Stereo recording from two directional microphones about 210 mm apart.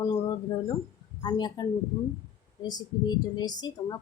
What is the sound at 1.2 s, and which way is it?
Speech, 20° left (ahead or behind).